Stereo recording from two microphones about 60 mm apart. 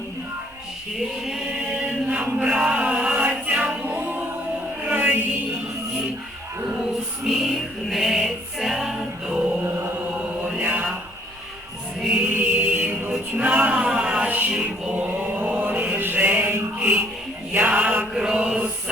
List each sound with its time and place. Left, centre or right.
0.9 s chant: centre; by 4.0 s right
4.0 s music: right
7.3 s music: centre
10.2 s mantra: right
11.9 s music: centre
12.2 s music: right
13.7 s music: centre
14.3 s music: right
14.9 s mantra: right
16.6 s music: right
18.1 s mantra: centre